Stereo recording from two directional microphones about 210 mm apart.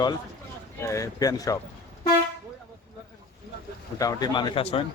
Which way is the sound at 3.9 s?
20° left (ahead or behind).